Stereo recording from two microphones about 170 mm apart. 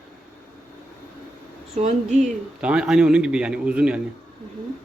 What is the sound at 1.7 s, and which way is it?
Speech, 45° right (ahead or behind).